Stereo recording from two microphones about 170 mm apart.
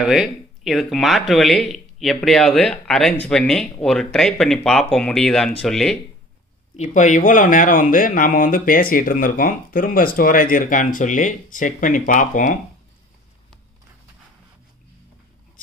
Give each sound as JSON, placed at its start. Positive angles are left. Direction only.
{"t": 0.0, "sound": "speech", "side_deg": 0}
{"t": 6.8, "sound": "speech", "side_deg": 45}